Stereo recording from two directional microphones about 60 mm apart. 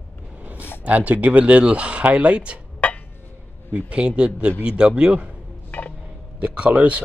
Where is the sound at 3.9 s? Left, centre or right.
Centre.